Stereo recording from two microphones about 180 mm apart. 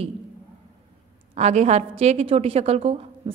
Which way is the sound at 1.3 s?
40° right (ahead or behind).